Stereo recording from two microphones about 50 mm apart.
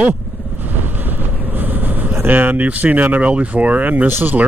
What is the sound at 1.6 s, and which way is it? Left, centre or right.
Vehicle, right.